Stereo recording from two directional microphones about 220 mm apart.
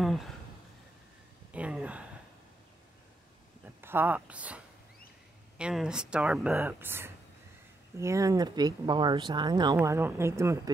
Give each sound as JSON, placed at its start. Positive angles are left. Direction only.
{"t": 0.0, "sound": "a sound", "side_deg": 0}
{"t": 1.5, "sound": "speech", "side_deg": -5}
{"t": 3.6, "sound": "speech", "side_deg": -10}
{"t": 5.6, "sound": "speech", "side_deg": -5}